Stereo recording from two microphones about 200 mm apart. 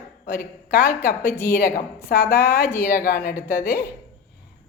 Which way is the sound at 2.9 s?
50° left (ahead or behind).